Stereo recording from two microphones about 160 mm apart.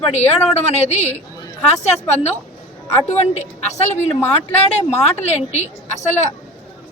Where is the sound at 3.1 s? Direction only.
45° left (ahead or behind).